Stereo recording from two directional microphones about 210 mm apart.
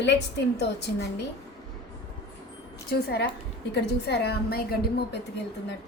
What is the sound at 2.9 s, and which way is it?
A woman's voice, 50° left (ahead or behind).